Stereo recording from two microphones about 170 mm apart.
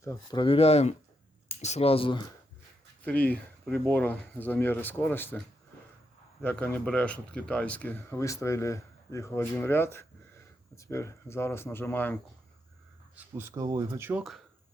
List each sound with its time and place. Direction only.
0.3 s speech: 30° left (ahead or behind)
3.0 s speech: 10° left (ahead or behind)
6.4 s speech: 10° left (ahead or behind)
13.1 s speech: 10° right (ahead or behind)